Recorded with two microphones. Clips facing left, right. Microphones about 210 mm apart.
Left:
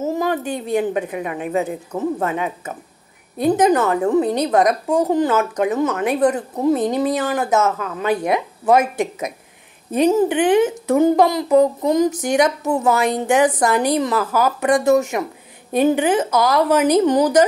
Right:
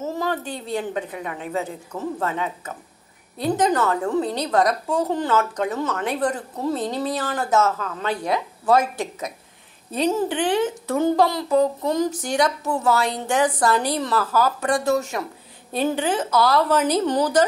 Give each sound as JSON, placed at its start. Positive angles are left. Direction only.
{"t": 0.1, "sound": "a woman's voice", "side_deg": 15}